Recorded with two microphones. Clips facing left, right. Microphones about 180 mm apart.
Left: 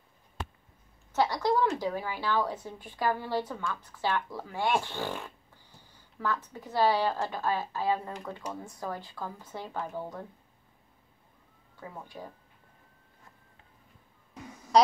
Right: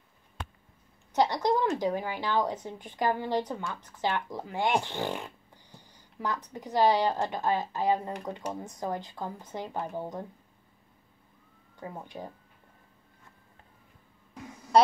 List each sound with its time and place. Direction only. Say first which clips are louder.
1.1 s a woman's voice: right 1 dB; 20° right (ahead or behind)
11.9 s a woman's voice: right 2 dB; 20° right (ahead or behind)